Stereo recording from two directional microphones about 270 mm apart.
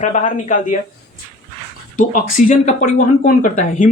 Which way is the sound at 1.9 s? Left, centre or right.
Left.